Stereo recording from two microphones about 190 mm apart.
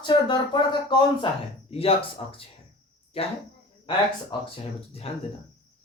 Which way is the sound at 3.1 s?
30° left (ahead or behind).